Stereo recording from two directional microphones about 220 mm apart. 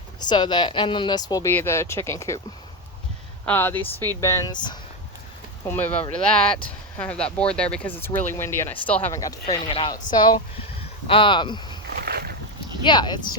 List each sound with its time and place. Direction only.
0.2 s speech: 20° left (ahead or behind)
3.4 s speech: 10° left (ahead or behind)
5.6 s speech: 10° left (ahead or behind)
9.5 s speech: 25° left (ahead or behind)
11.9 s boat: 45° right (ahead or behind)
12.8 s speech: 20° left (ahead or behind)